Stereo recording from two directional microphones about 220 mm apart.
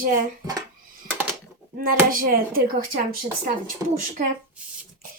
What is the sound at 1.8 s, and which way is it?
A woman's voice, 40° right (ahead or behind).